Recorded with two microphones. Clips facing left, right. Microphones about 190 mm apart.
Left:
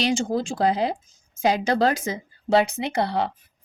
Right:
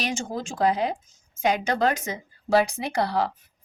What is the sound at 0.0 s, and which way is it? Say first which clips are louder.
A woman's voice: left 6 dB; 30° left (ahead or behind).